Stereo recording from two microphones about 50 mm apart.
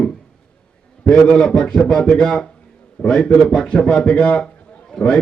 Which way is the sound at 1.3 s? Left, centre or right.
Centre.